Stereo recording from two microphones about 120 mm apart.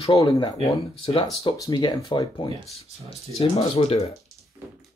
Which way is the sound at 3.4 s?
60° left (ahead or behind).